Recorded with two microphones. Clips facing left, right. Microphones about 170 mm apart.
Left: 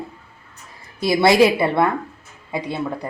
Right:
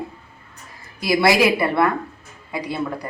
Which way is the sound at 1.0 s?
25° left (ahead or behind).